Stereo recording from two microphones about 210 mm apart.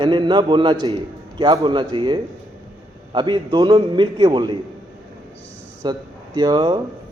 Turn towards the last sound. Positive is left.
turn(degrees=-20)  # may be behind; listen again after turning